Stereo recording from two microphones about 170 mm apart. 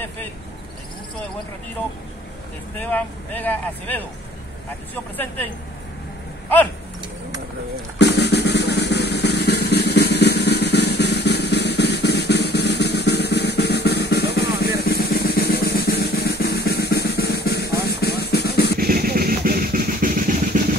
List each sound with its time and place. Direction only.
2.8 s speech: 10° left (ahead or behind)
5.1 s speech: 10° left (ahead or behind)
8.0 s drum: 80° left
18.8 s drum: 60° right (ahead or behind)